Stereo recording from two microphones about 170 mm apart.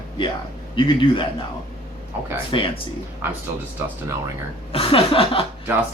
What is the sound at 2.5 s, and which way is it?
Speech, 30° left (ahead or behind).